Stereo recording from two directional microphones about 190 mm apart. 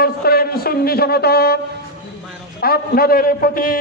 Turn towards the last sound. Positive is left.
turn(degrees=50)  # may be behind; listen again after turning